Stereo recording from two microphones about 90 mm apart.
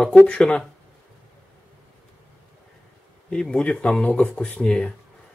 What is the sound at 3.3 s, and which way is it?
Speech, 10° left (ahead or behind).